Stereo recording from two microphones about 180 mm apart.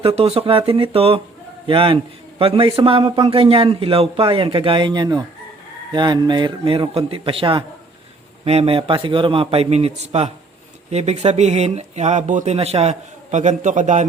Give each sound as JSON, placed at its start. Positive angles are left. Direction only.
{"t": 0.0, "sound": "a man's voice", "side_deg": -35}